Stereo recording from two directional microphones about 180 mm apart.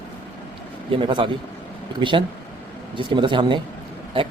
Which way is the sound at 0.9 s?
30° right (ahead or behind).